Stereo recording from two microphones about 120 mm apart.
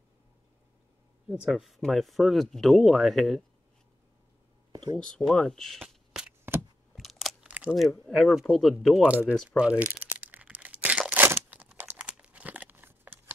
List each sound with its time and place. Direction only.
1.3 s speech: 5° right (ahead or behind)
4.9 s speech: 5° left (ahead or behind)
6.5 s a sound: 20° right (ahead or behind)
7.0 s crunch: centre (ahead or behind)
7.4 s a sound: 10° right (ahead or behind)
8.1 s speech: 5° left (ahead or behind)
9.6 s crumpling: 10° right (ahead or behind)